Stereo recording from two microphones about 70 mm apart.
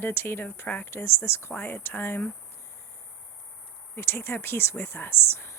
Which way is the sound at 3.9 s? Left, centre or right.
Left.